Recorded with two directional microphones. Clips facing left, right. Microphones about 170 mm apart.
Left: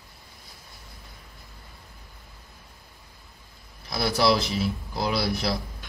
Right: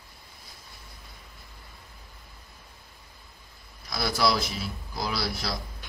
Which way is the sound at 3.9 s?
25° left (ahead or behind).